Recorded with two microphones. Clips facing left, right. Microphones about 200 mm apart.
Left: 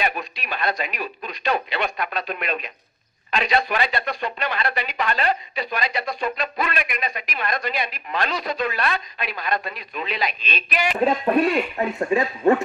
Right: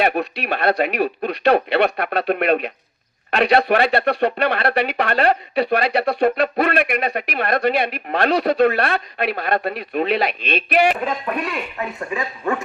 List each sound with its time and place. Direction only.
0.0 s speech: 65° right (ahead or behind)
11.1 s speech: 30° left (ahead or behind)